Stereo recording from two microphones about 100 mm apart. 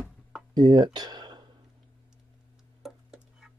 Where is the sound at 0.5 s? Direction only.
45° right (ahead or behind).